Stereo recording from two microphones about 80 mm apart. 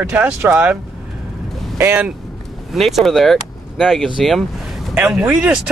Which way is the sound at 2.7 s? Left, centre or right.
Centre.